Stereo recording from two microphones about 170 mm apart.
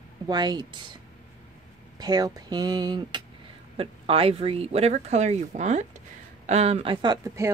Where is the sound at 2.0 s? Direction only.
25° right (ahead or behind).